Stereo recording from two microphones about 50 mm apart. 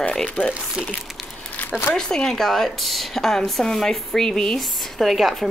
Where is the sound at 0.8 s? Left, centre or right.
Centre.